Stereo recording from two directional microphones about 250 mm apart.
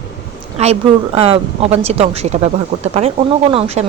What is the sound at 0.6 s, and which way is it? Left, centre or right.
A woman's voice, right.